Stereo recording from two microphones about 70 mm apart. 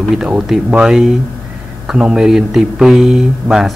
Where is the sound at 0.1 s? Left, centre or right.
Centre.